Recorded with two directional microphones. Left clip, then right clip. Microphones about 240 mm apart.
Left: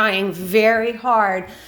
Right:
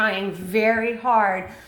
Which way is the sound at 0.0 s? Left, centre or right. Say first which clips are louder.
Left 4 dB; left.